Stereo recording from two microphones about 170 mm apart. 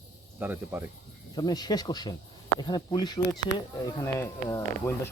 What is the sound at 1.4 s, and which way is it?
Speech, 25° left (ahead or behind).